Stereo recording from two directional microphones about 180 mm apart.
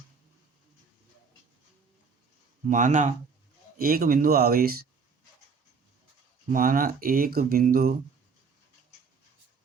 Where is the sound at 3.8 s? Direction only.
55° right (ahead or behind).